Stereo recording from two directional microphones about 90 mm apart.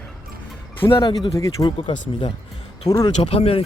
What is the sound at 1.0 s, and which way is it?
Speech, 65° left (ahead or behind).